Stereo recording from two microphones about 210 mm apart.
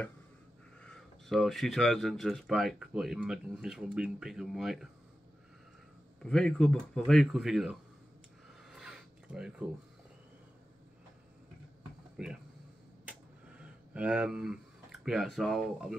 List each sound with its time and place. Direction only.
0.8 s speech: centre (ahead or behind)
6.2 s speech: 5° left (ahead or behind)
8.6 s crow: 5° right (ahead or behind)
12.2 s speech: 5° right (ahead or behind)
13.1 s a sound: 5° right (ahead or behind)